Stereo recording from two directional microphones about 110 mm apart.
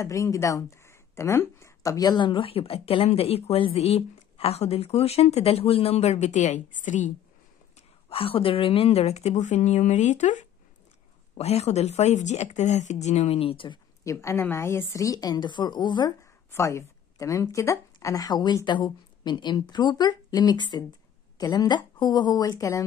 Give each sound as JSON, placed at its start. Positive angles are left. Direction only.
{"t": 0.0, "sound": "speech", "side_deg": 30}
{"t": 8.1, "sound": "speech", "side_deg": 60}
{"t": 11.3, "sound": "speech", "side_deg": 75}
{"t": 14.2, "sound": "speech", "side_deg": 25}
{"t": 16.5, "sound": "speech", "side_deg": 25}